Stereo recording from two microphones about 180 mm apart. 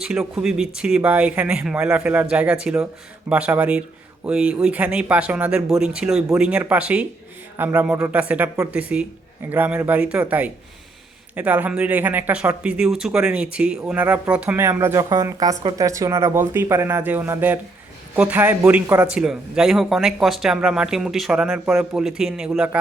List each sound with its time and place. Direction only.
0.0 s a man's voice: 5° right (ahead or behind)